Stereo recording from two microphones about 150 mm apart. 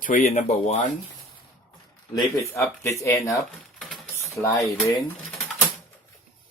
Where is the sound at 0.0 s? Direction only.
60° left (ahead or behind).